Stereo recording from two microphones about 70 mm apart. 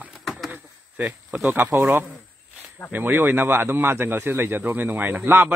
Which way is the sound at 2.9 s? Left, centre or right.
Right.